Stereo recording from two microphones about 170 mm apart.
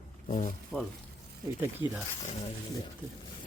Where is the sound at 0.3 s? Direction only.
45° left (ahead or behind).